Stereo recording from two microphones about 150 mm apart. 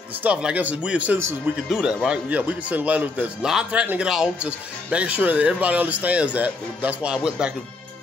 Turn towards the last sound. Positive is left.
turn(degrees=-5)  # may be behind; listen again after turning